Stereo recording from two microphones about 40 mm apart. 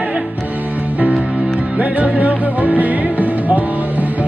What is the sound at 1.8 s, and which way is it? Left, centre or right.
Music, right.